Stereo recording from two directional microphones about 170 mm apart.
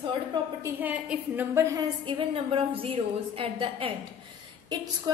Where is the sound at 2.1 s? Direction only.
30° right (ahead or behind).